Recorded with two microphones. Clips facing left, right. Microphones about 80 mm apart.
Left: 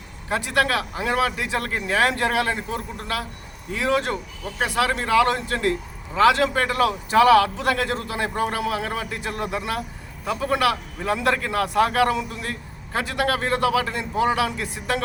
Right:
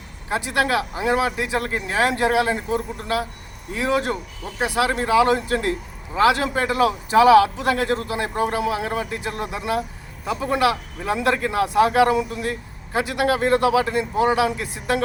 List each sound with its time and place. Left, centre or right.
0.3 s a man's voice: centre